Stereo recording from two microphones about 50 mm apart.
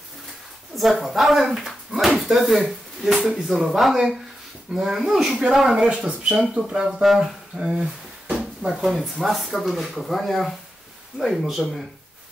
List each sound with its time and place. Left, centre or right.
0.7 s speech: centre
5.8 s speech: centre
6.8 s speech: centre
7.5 s speech: centre